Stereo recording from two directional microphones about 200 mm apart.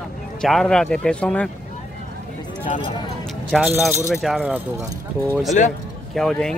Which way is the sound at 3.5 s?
Centre (ahead or behind).